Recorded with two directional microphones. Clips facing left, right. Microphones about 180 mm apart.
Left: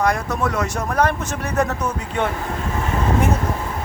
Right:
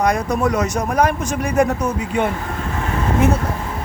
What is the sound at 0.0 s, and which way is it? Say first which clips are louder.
Speech: right 3 dB; 20° right (ahead or behind).